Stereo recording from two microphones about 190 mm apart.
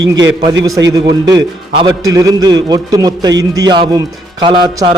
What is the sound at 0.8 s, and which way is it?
Speech, 20° right (ahead or behind).